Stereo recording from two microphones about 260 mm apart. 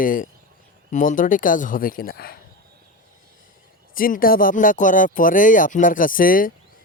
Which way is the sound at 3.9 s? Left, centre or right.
Left.